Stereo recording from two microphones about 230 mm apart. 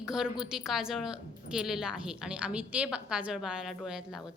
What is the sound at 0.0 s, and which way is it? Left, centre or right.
A woman's voice, centre.